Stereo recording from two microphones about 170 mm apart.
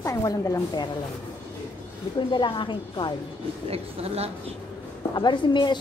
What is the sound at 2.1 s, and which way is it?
Speech, 30° left (ahead or behind).